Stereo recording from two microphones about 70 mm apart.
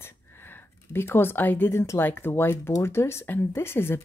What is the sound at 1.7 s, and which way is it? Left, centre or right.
A woman's voice, left.